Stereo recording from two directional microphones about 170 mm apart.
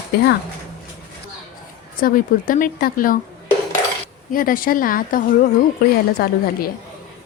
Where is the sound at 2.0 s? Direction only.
55° left (ahead or behind).